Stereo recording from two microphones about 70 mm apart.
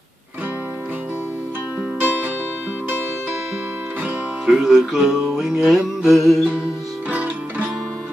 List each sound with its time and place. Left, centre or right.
2.0 s music: right
4.5 s music: centre
7.1 s music: centre